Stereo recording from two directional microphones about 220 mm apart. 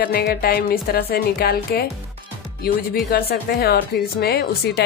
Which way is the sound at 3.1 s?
45° left (ahead or behind).